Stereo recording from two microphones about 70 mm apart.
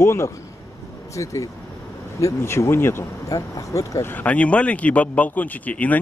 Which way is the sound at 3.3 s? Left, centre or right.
Left.